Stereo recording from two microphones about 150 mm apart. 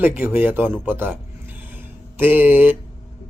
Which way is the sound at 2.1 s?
10° right (ahead or behind).